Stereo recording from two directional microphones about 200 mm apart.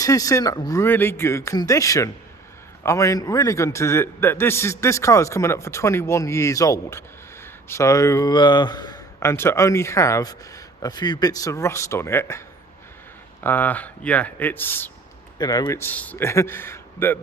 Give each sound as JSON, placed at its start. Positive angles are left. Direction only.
{"t": 0.0, "sound": "a man's voice", "side_deg": 15}
{"t": 13.4, "sound": "a man's voice", "side_deg": 10}